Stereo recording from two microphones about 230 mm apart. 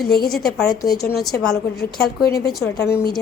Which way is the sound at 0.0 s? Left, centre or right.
Left.